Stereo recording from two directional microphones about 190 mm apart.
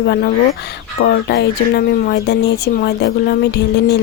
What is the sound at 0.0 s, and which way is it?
Speech, 60° left (ahead or behind).